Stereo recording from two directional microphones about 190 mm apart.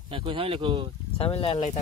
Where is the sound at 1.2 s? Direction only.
30° left (ahead or behind).